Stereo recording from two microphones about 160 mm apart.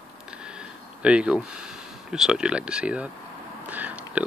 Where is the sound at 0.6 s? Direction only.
5° right (ahead or behind).